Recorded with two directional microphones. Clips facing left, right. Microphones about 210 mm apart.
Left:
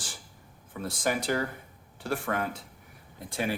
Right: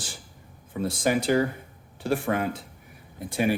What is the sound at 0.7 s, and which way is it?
Speech, 20° right (ahead or behind).